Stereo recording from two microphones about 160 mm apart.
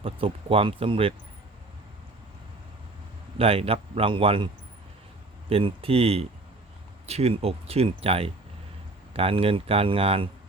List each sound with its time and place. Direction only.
0.0 s speech: 35° right (ahead or behind)
3.3 s speech: 35° right (ahead or behind)
5.5 s speech: 35° right (ahead or behind)